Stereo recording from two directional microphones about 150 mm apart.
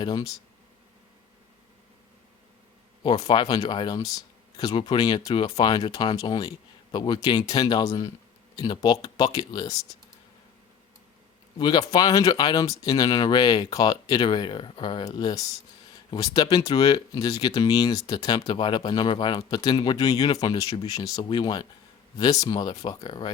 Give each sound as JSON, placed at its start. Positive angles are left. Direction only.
{"t": 0.0, "sound": "speech", "side_deg": 25}
{"t": 3.2, "sound": "speech", "side_deg": 30}
{"t": 11.5, "sound": "speech", "side_deg": 30}